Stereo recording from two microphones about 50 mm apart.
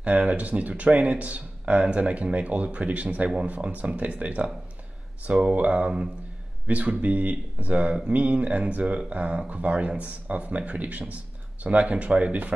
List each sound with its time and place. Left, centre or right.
0.0 s speech: right